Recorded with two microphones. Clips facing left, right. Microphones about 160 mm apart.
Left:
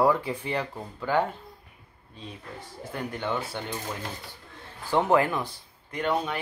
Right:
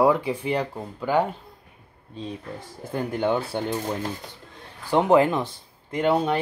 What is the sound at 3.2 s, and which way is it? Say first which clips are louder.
Speech: right 8 dB; 40° right (ahead or behind).